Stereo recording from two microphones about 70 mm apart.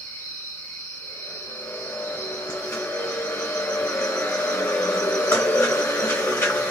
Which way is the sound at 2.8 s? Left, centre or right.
Left.